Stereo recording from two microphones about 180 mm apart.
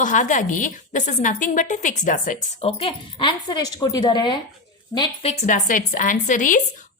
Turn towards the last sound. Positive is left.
turn(degrees=45)  # may be behind; listen again after turning